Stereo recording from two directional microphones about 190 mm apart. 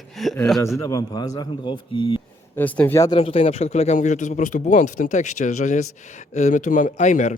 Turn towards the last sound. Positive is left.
turn(degrees=40)  # may be behind; listen again after turning